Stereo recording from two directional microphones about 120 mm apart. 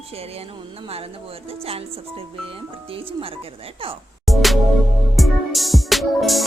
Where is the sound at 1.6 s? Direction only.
55° right (ahead or behind).